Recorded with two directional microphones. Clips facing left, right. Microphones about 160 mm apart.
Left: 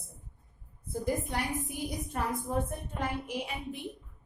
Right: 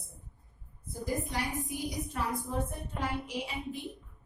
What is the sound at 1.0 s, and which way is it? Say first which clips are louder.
A woman's voice: left 1 dB; 55° left (ahead or behind).